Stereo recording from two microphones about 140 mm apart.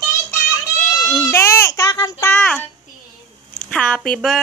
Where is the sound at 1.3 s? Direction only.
15° left (ahead or behind).